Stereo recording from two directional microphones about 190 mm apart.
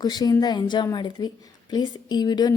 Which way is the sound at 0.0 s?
20° left (ahead or behind).